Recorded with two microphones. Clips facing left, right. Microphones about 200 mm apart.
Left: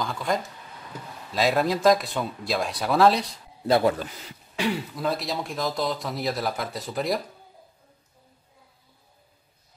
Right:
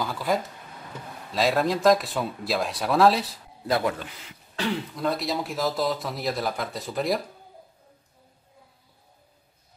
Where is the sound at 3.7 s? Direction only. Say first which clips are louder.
Left 4 dB; 30° left (ahead or behind).